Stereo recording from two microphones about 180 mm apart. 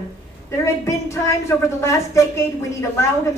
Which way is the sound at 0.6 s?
15° left (ahead or behind).